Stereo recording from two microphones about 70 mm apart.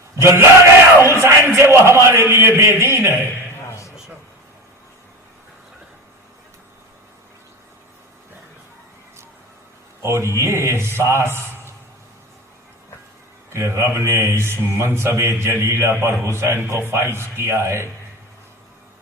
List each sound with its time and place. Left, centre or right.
0.2 s a man's voice: right
3.7 s a sound: left
10.0 s a man's voice: right
13.5 s a man's voice: right